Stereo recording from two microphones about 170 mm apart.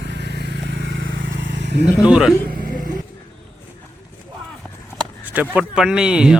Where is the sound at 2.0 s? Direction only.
5° right (ahead or behind).